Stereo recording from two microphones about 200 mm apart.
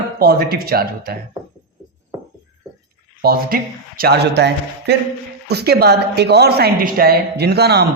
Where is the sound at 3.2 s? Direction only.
50° right (ahead or behind).